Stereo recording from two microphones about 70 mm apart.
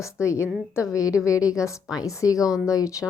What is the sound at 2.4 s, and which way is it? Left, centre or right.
Speech, centre.